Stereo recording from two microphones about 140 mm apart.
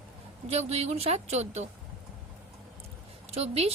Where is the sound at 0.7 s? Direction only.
50° right (ahead or behind).